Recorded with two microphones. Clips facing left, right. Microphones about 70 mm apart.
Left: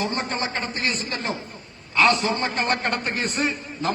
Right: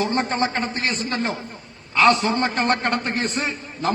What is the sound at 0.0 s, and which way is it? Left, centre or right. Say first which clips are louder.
A man's voice: right 5 dB; right.